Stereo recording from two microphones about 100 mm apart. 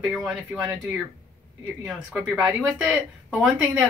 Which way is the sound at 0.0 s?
Centre (ahead or behind).